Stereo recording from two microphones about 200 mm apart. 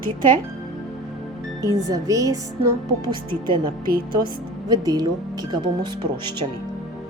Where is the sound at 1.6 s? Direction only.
15° right (ahead or behind).